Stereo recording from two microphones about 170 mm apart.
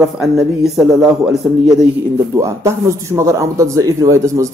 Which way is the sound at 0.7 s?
5° right (ahead or behind).